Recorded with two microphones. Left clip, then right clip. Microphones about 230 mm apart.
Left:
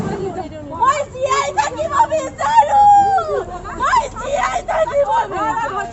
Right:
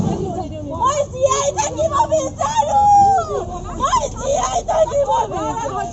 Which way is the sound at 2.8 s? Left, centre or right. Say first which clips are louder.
Right 2 dB; left.